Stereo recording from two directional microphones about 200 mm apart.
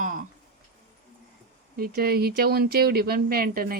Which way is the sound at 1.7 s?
50° right (ahead or behind).